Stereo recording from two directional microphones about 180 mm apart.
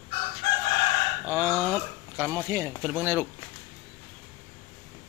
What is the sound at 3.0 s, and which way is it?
Speech, 10° right (ahead or behind).